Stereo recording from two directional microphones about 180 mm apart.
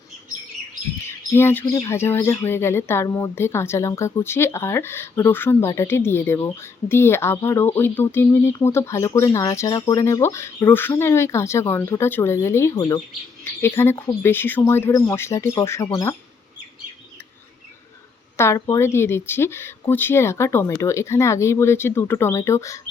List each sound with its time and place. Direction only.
1.0 s speech: 15° left (ahead or behind)
18.3 s speech: 15° left (ahead or behind)